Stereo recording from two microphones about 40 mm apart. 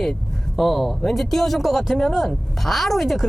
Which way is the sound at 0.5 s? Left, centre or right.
Centre.